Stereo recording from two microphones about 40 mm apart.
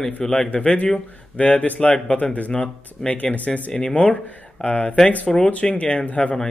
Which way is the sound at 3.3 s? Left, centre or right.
Left.